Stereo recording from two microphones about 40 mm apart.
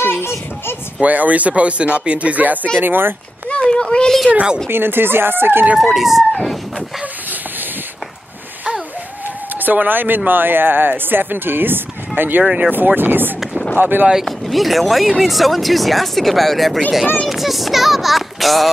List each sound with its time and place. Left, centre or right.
0.0 s a sound: left
1.0 s speech: right
2.8 s speech: right
3.4 s a sound: left
4.6 s speech: right
5.8 s speech: centre
9.6 s speech: right
12.4 s speech: right
12.7 s speech: right
14.2 s speech: centre